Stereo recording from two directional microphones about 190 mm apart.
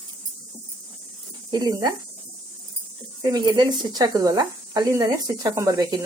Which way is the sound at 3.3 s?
20° right (ahead or behind).